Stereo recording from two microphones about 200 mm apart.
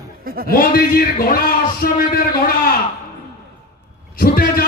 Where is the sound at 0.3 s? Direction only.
45° right (ahead or behind).